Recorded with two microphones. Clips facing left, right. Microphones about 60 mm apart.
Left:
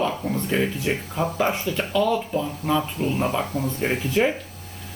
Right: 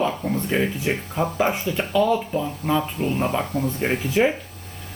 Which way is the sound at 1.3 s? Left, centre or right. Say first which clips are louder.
Right 1 dB; right.